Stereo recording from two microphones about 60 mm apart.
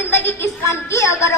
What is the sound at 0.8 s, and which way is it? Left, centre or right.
Speech, left.